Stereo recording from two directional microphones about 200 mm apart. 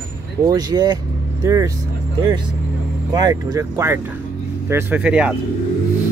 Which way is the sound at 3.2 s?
20° right (ahead or behind).